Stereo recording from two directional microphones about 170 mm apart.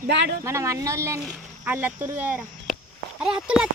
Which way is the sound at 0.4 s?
15° right (ahead or behind).